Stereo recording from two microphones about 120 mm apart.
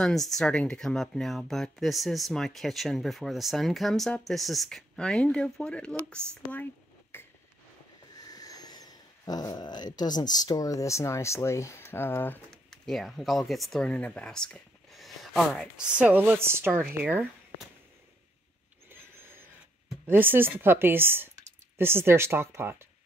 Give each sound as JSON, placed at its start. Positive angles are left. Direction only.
{"t": 0.0, "sound": "speech", "side_deg": 0}
{"t": 8.2, "sound": "speech", "side_deg": 30}
{"t": 12.8, "sound": "speech", "side_deg": 0}
{"t": 16.0, "sound": "speech", "side_deg": -15}
{"t": 18.9, "sound": "a sound", "side_deg": -20}
{"t": 20.1, "sound": "speech", "side_deg": -15}